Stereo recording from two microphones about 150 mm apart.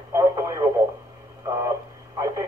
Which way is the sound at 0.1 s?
20° right (ahead or behind).